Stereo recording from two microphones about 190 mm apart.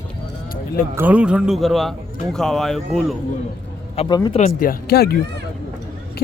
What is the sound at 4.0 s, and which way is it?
Speech, 25° left (ahead or behind).